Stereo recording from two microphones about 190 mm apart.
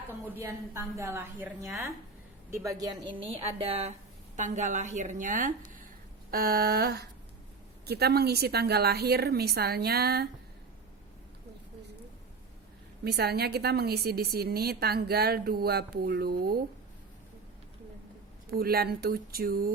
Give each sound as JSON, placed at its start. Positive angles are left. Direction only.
{"t": 0.3, "sound": "a woman's voice", "side_deg": -15}
{"t": 13.1, "sound": "a woman's voice", "side_deg": -55}
{"t": 18.4, "sound": "speech", "side_deg": -55}